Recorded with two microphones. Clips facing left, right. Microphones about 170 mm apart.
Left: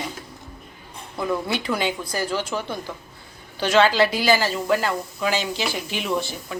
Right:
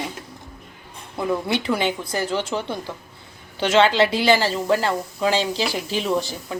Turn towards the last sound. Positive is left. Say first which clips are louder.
# right 2 dB
turn(degrees=-30)  # may be behind; listen again after turning